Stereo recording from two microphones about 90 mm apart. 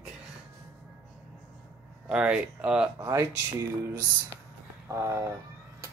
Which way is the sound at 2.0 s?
10° right (ahead or behind).